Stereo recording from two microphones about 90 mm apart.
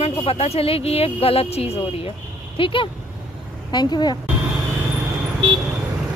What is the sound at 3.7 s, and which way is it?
Speech, 50° left (ahead or behind).